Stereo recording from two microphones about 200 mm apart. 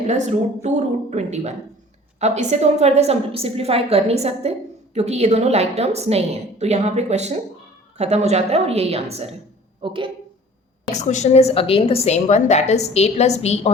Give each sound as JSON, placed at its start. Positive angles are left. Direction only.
{"t": 0.1, "sound": "a woman's voice", "side_deg": -35}
{"t": 11.0, "sound": "a woman's voice", "side_deg": 35}